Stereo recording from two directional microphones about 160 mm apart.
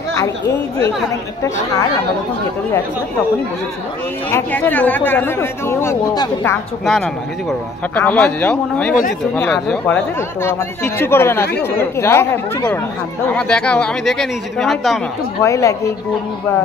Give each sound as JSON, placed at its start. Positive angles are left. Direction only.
{"t": 4.3, "sound": "speech", "side_deg": 10}
{"t": 7.9, "sound": "speech", "side_deg": 10}
{"t": 15.4, "sound": "speech", "side_deg": 20}